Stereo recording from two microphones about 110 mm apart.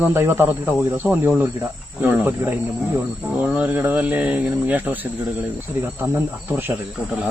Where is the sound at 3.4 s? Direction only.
15° right (ahead or behind).